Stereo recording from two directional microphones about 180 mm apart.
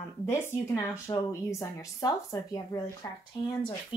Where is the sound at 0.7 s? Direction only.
15° left (ahead or behind).